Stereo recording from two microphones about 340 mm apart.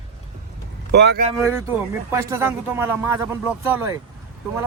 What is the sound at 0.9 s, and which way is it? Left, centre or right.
Speech, right.